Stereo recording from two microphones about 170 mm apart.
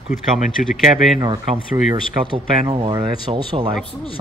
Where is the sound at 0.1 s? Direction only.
45° left (ahead or behind).